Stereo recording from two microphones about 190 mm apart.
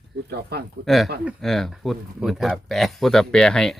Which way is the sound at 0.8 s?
Centre (ahead or behind).